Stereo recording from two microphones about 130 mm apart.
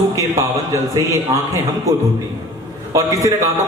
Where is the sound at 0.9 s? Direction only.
25° right (ahead or behind).